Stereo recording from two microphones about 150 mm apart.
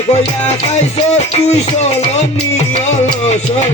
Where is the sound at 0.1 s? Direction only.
45° left (ahead or behind).